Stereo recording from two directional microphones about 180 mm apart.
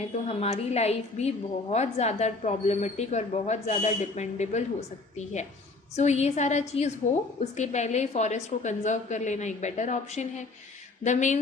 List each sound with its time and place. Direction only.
0.3 s a woman's voice: 35° left (ahead or behind)